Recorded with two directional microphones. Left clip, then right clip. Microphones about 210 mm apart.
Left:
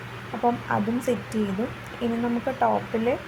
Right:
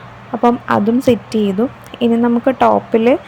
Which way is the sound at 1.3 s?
40° right (ahead or behind).